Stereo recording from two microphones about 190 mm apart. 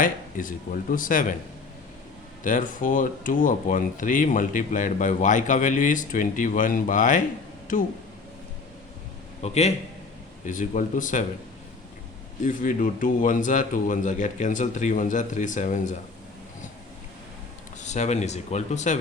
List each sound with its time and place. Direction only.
0.0 s speech: 45° left (ahead or behind)
2.4 s speech: 45° left (ahead or behind)
9.4 s speech: 35° left (ahead or behind)
12.4 s speech: 45° left (ahead or behind)
17.7 s speech: 40° left (ahead or behind)